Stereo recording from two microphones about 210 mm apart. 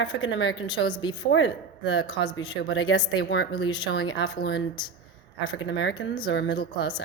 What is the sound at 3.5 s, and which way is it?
Speech, 20° left (ahead or behind).